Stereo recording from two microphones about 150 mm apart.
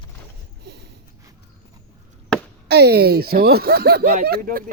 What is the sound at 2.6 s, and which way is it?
Speech, 90° right.